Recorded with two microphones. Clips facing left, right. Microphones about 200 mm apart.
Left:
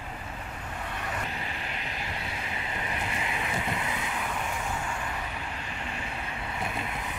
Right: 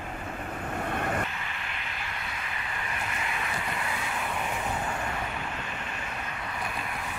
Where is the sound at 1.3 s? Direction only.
35° left (ahead or behind).